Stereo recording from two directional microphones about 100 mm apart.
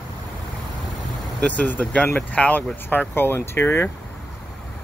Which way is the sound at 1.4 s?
15° left (ahead or behind).